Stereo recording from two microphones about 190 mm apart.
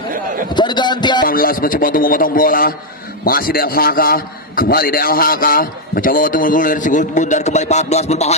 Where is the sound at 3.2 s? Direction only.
50° left (ahead or behind).